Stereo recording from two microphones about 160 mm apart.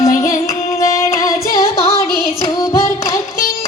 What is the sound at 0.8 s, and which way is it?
Singing, 20° left (ahead or behind).